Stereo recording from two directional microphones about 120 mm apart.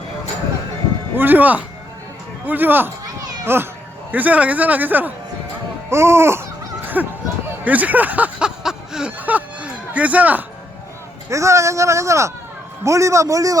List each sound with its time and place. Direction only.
1.1 s a man's voice: 15° right (ahead or behind)
5.9 s babbling: 20° right (ahead or behind)
7.6 s a sound: 15° right (ahead or behind)
11.3 s speech: 25° right (ahead or behind)